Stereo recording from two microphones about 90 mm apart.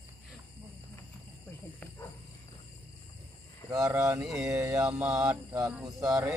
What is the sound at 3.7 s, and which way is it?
Speech, 35° right (ahead or behind).